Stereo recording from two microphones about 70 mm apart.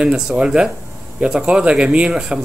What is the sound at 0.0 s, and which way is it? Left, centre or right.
Speech, centre.